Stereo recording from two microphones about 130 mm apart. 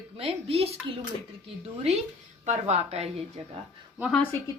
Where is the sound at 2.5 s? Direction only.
55° right (ahead or behind).